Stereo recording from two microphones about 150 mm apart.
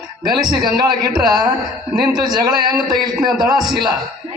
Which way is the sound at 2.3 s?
25° right (ahead or behind).